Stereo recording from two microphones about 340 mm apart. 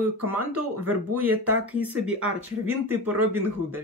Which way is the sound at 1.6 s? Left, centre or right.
Centre.